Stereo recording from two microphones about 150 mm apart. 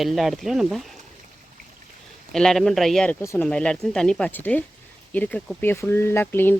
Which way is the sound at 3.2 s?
20° left (ahead or behind).